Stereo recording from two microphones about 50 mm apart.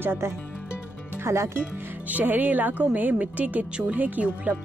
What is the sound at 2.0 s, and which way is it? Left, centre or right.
Speech, right.